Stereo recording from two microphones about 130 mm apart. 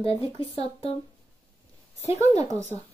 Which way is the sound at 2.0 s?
20° right (ahead or behind).